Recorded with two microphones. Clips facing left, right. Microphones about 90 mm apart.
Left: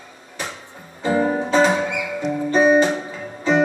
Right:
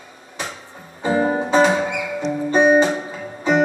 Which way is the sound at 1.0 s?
20° right (ahead or behind).